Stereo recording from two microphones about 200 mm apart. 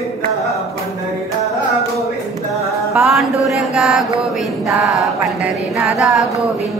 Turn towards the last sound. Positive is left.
turn(degrees=0)  # may be behind; listen again after turning